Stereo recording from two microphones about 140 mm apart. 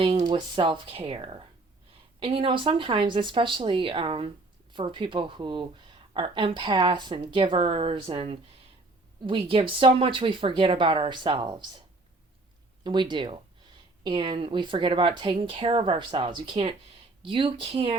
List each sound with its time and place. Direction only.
0.0 s speech: 40° right (ahead or behind)
12.8 s speech: 35° right (ahead or behind)